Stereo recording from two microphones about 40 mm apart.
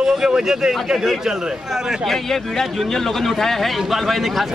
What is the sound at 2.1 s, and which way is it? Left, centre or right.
Speech, centre.